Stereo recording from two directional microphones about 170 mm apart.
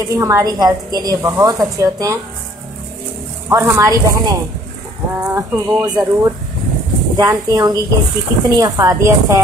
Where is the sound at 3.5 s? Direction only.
15° right (ahead or behind).